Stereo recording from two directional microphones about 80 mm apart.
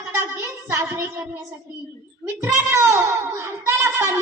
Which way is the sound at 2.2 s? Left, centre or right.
Right.